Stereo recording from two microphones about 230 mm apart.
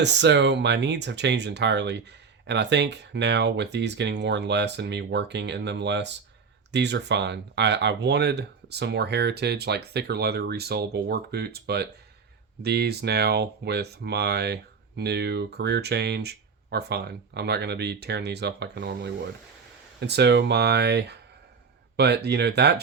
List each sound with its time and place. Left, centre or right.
0.0 s speech: right